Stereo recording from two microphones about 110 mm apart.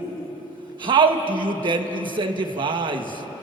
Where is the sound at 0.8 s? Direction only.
45° right (ahead or behind).